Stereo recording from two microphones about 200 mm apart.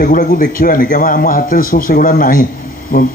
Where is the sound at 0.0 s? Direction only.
40° left (ahead or behind).